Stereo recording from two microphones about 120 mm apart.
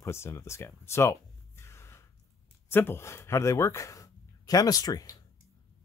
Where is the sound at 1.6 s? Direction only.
20° left (ahead or behind).